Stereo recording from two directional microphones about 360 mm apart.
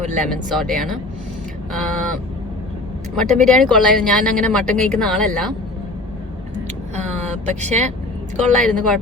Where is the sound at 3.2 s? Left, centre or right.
Centre.